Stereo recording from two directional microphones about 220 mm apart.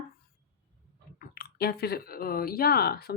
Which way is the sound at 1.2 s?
45° left (ahead or behind).